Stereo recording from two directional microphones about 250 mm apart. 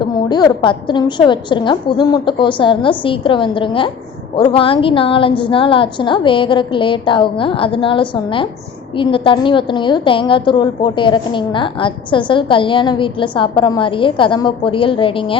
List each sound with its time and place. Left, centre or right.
0.0 s a woman's voice: centre